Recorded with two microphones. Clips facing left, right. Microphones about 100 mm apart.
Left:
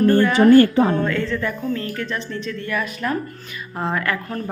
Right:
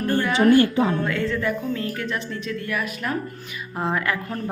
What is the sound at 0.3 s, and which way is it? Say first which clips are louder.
Speech: left 3 dB; 45° left (ahead or behind).